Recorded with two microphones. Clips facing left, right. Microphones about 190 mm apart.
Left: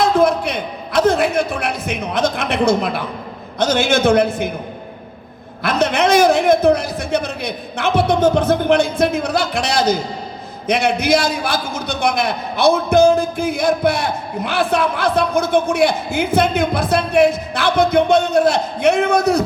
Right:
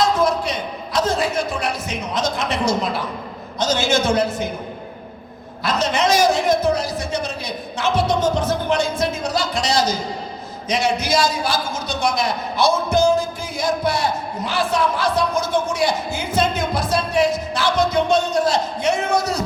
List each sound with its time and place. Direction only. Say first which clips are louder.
0.0 s a sound: left 4 dB; 60° left (ahead or behind)
3.6 s a man's voice: left 4 dB; 60° left (ahead or behind)
5.6 s a man's voice: left 3 dB; 60° left (ahead or behind)